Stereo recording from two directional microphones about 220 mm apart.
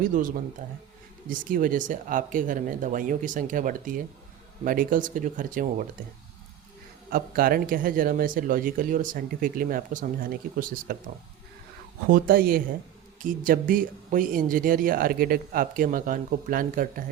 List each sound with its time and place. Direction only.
0.0 s speech: 40° right (ahead or behind)
7.1 s speech: 40° right (ahead or behind)
12.0 s speech: 40° right (ahead or behind)